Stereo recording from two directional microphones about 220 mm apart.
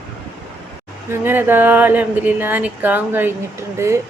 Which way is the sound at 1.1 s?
10° right (ahead or behind).